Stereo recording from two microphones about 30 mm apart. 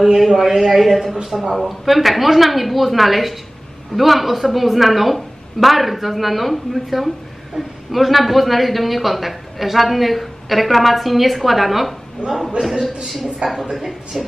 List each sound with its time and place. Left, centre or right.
0.0 s a woman's voice: centre
13.4 s a woman's voice: right
13.7 s a woman's voice: centre